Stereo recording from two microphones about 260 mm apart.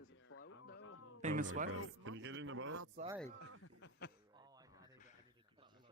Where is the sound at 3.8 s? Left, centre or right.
Left.